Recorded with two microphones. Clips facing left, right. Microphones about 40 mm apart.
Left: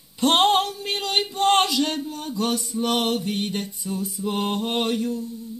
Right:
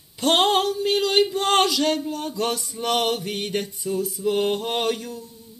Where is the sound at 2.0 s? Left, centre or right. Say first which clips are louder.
Right 2 dB; centre.